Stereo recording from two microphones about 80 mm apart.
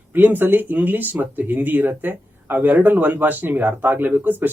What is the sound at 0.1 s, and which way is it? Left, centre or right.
Speech, right.